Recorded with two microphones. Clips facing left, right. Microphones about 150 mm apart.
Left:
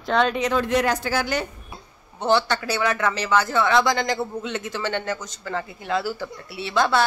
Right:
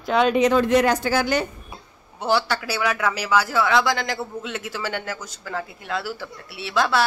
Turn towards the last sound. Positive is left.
turn(degrees=0)  # may be behind; listen again after turning